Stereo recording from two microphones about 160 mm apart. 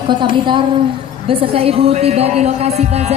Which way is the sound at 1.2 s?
35° right (ahead or behind).